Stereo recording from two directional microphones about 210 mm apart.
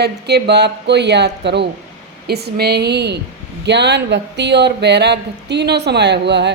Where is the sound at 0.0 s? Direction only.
50° right (ahead or behind).